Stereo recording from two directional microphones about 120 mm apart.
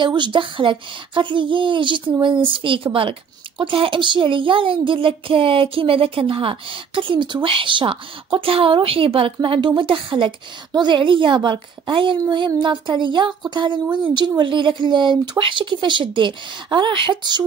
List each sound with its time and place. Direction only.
0.0 s a woman's voice: 40° right (ahead or behind)